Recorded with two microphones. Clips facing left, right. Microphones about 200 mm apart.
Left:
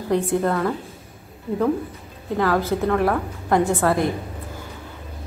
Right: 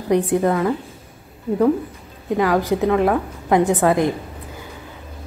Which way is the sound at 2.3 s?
15° right (ahead or behind).